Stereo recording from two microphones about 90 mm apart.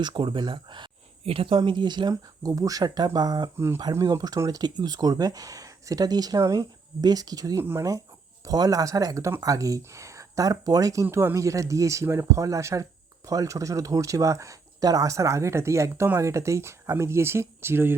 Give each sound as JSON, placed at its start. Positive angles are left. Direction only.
{"t": 0.0, "sound": "speech", "side_deg": -65}
{"t": 2.5, "sound": "speech", "side_deg": -40}
{"t": 11.0, "sound": "speech", "side_deg": -25}